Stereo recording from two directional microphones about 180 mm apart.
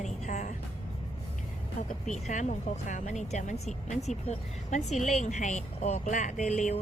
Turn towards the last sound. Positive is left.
turn(degrees=40)  # may be behind; listen again after turning